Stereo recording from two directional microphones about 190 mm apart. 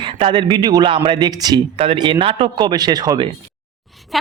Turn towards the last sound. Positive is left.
turn(degrees=0)  # may be behind; listen again after turning